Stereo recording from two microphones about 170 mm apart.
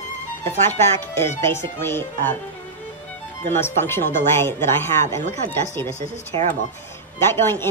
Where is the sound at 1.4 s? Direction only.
15° left (ahead or behind).